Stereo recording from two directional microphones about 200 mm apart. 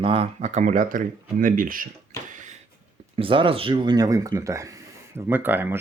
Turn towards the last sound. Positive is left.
turn(degrees=-10)  # may be behind; listen again after turning